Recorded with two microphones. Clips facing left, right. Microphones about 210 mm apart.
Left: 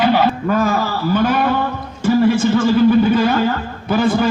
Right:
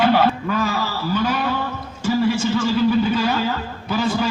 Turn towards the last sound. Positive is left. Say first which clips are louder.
# left 5 dB
turn(degrees=55)  # may be behind; listen again after turning